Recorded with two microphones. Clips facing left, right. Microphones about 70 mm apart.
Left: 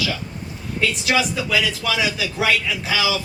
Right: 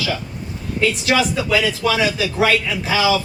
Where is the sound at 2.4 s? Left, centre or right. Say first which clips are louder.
Right 3 dB; right.